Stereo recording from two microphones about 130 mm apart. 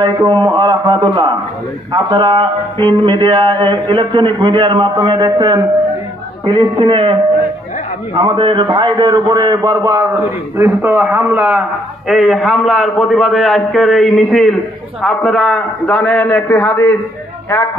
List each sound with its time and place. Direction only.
0.0 s speech: 35° right (ahead or behind)
8.2 s speech: 40° right (ahead or behind)
9.8 s a man's voice: 15° right (ahead or behind); by 16.9 s 10° left (ahead or behind)